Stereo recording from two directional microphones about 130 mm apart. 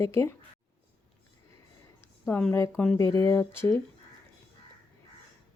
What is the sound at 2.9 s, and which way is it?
Speech, 20° left (ahead or behind).